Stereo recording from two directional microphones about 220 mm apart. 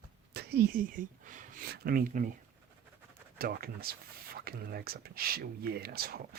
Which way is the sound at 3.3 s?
45° right (ahead or behind).